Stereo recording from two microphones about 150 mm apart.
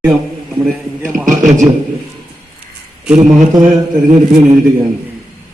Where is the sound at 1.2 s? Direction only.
60° right (ahead or behind).